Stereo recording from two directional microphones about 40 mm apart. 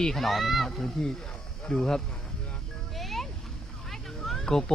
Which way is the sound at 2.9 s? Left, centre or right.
Centre.